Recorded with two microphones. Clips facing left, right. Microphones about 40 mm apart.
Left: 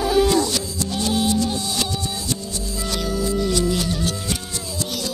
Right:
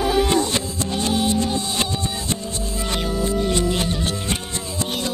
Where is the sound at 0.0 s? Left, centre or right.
Centre.